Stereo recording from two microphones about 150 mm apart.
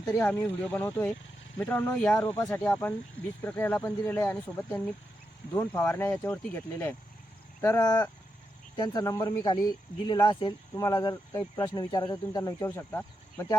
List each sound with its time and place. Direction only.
0.2 s speech: 15° left (ahead or behind)
12.6 s speech: 15° left (ahead or behind)